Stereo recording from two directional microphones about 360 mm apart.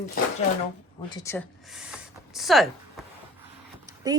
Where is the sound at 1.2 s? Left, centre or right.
Centre.